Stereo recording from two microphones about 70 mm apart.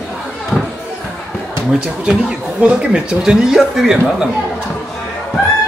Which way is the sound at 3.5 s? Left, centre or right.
Centre.